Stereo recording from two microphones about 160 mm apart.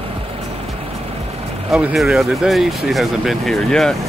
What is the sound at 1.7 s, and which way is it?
Speech, centre (ahead or behind).